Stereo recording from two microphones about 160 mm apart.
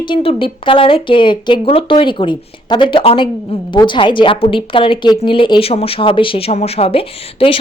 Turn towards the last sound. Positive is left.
turn(degrees=35)  # may be behind; listen again after turning